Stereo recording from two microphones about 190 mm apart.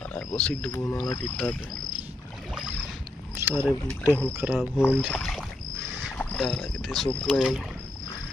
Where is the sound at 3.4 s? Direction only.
10° right (ahead or behind).